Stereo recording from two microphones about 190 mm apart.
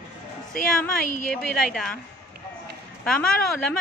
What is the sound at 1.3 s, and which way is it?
Speech, 5° left (ahead or behind).